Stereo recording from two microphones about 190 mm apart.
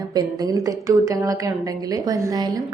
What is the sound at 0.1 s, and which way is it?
A woman's voice, 20° right (ahead or behind).